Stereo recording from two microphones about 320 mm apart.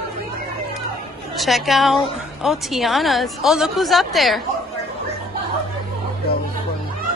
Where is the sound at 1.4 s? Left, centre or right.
Centre.